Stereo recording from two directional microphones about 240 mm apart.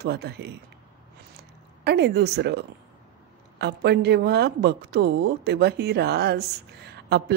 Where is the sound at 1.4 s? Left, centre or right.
Right.